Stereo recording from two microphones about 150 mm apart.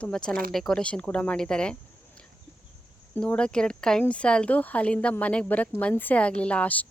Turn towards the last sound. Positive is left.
turn(degrees=10)  # may be behind; listen again after turning